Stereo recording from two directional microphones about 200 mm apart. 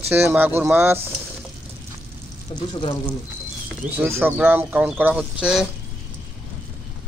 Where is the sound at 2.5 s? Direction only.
30° left (ahead or behind).